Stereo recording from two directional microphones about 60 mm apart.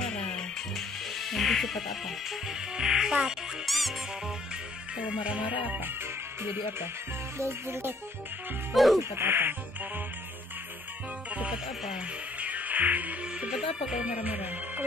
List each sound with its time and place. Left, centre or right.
0.0 s music: centre
3.6 s speech: centre
4.9 s music: centre
6.4 s speech: right
7.3 s music: right
8.7 s speech: centre
9.1 s speech: right
12.4 s music: right
13.5 s music: centre